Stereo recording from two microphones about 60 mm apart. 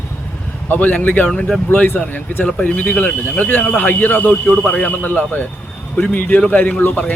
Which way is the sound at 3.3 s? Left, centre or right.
Left.